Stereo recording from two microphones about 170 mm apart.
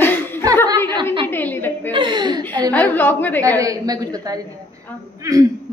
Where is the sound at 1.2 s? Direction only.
10° left (ahead or behind).